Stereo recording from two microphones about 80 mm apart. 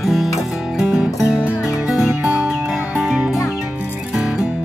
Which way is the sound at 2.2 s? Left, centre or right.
Centre.